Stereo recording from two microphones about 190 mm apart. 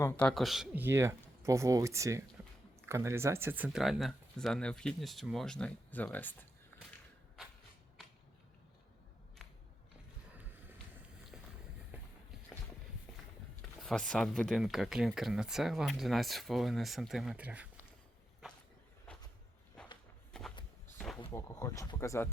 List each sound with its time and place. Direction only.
0.0 s speech: 5° left (ahead or behind)
11.3 s run: 5° right (ahead or behind)
13.8 s speech: 5° left (ahead or behind)
19.1 s walk: 5° left (ahead or behind)
21.2 s speech: 15° left (ahead or behind)